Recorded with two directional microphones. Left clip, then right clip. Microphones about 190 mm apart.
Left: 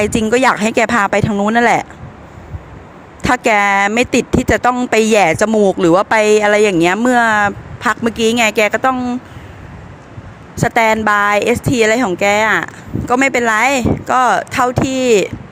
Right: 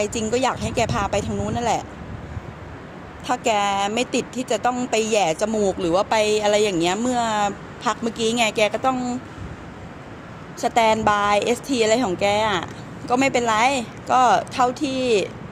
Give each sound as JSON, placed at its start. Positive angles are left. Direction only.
{"t": 0.0, "sound": "speech", "side_deg": 40}
{"t": 3.2, "sound": "speech", "side_deg": 40}
{"t": 10.6, "sound": "speech", "side_deg": 30}